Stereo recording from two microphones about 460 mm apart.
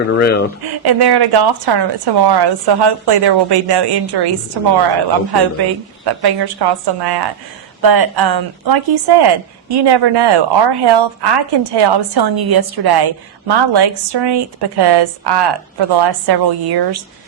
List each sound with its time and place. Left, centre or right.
0.1 s speech: left
0.6 s speech: right
6.1 s speech: right